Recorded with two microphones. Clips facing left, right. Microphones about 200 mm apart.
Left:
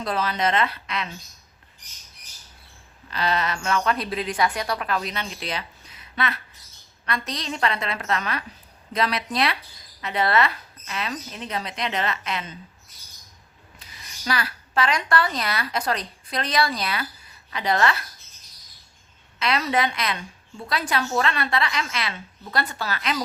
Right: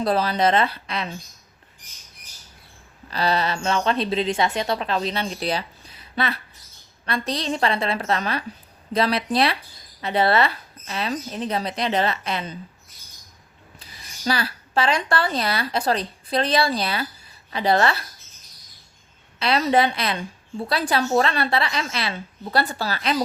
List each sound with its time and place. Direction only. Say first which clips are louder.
0.0 s a woman's voice: right 5 dB; 35° right (ahead or behind)
3.1 s a woman's voice: right 3 dB; 35° right (ahead or behind)
14.3 s a woman's voice: right 3 dB; 30° right (ahead or behind)
19.4 s a woman's voice: right 4 dB; 30° right (ahead or behind)